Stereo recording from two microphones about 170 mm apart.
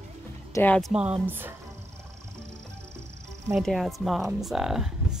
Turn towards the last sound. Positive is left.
turn(degrees=-5)  # may be behind; listen again after turning